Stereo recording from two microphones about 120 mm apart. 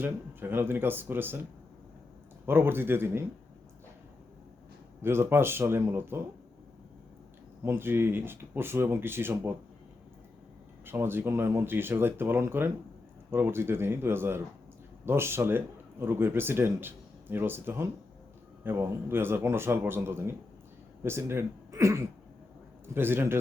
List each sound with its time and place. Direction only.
0.0 s speech: 15° right (ahead or behind)
2.5 s speech: 20° right (ahead or behind)
5.0 s speech: 20° right (ahead or behind)
7.6 s speech: 20° right (ahead or behind)
10.8 s a man's voice: 20° right (ahead or behind)